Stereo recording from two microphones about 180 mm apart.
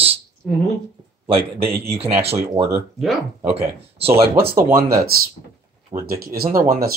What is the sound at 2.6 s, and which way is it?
Speech, 35° right (ahead or behind).